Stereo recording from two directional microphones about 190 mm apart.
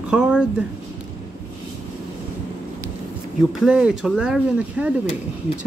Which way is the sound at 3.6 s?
5° right (ahead or behind).